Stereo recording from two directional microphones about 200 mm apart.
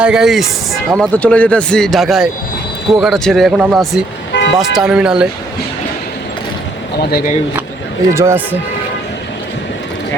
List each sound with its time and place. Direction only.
0.0 s speech: 5° right (ahead or behind)
4.3 s vehicle: 60° left (ahead or behind)
4.5 s speech: centre (ahead or behind)
7.1 s speech: 45° left (ahead or behind)
8.1 s speech: 15° right (ahead or behind)